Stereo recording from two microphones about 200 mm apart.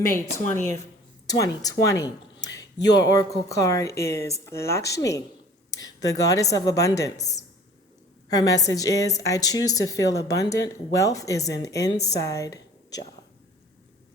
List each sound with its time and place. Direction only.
0.0 s speech: 15° left (ahead or behind)
8.3 s speech: 15° left (ahead or behind)